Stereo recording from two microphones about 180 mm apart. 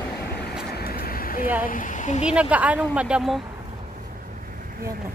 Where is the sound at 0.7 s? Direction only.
60° left (ahead or behind).